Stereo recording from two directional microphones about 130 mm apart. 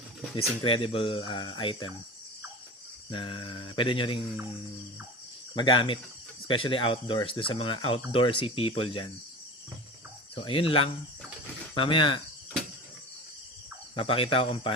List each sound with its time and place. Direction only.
0.3 s speech: 45° left (ahead or behind)
3.1 s cricket: 40° left (ahead or behind)
5.5 s cricket: 40° left (ahead or behind)
6.5 s speech: 40° left (ahead or behind)
10.3 s speech: 45° left (ahead or behind)
11.7 s cricket: 40° left (ahead or behind)
13.9 s speech: 45° left (ahead or behind)